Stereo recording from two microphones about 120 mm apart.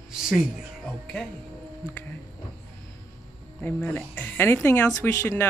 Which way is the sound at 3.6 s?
15° left (ahead or behind).